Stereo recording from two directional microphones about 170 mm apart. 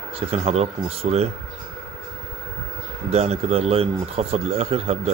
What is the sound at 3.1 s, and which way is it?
Speech, 40° right (ahead or behind).